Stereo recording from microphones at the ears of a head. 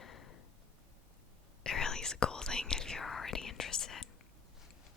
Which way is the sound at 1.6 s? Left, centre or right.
Left.